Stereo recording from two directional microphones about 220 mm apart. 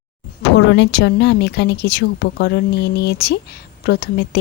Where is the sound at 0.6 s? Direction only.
50° left (ahead or behind).